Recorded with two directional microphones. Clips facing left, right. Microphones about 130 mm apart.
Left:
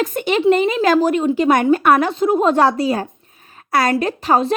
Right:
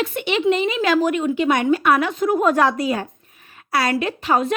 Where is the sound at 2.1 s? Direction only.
25° left (ahead or behind).